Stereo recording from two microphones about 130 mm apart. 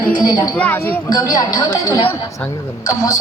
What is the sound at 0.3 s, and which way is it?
Speech, 30° left (ahead or behind).